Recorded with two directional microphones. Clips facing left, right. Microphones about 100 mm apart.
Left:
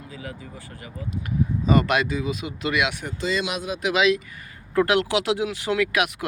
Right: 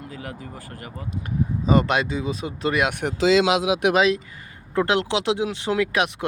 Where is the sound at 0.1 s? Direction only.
55° right (ahead or behind).